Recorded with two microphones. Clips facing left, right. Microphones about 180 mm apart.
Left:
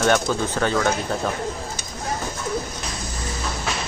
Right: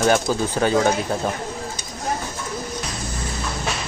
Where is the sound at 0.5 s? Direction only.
15° right (ahead or behind).